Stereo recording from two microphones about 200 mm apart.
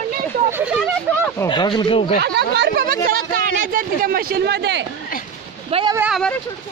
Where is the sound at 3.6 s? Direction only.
45° right (ahead or behind); by 4.9 s 60° right (ahead or behind).